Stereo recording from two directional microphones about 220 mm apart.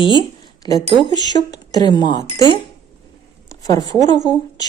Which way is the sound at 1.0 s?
20° left (ahead or behind).